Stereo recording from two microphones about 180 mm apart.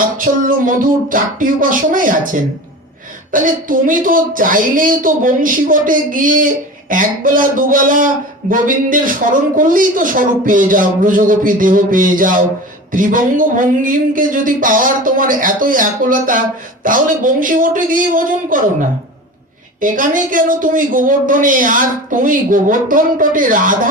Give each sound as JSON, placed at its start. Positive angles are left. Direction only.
{"t": 0.2, "sound": "a man's voice", "side_deg": -50}